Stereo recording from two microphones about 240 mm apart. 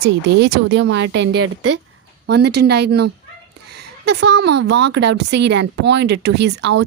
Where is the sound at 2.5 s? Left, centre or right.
Right.